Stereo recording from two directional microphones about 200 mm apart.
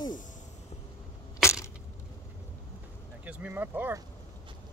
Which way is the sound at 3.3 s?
5° right (ahead or behind).